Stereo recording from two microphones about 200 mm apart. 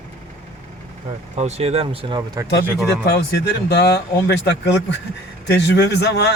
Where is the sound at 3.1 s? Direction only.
55° left (ahead or behind).